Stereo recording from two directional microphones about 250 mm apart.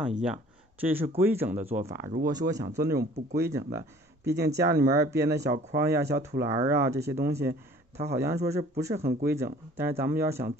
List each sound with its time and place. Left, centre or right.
0.0 s speech: centre
4.2 s speech: right
4.6 s speech: centre